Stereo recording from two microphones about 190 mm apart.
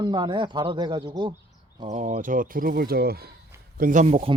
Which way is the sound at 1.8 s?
40° right (ahead or behind).